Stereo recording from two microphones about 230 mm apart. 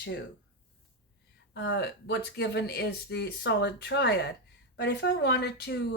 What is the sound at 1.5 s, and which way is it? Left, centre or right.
Speech, left.